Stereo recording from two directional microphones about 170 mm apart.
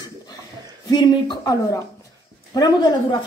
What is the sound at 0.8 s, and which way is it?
Speech, 25° left (ahead or behind).